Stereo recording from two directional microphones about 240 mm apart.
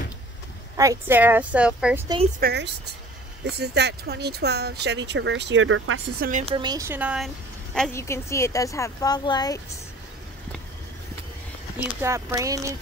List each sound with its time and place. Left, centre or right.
0.7 s speech: centre
2.4 s speech: right
6.1 s a woman's voice: right
6.4 s speech: centre
7.7 s a woman's voice: centre
12.0 s speech: centre